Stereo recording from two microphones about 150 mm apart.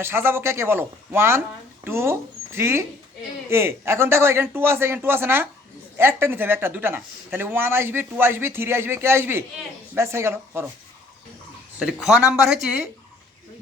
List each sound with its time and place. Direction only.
0.0 s speech: 15° right (ahead or behind)
11.8 s speech: 5° right (ahead or behind)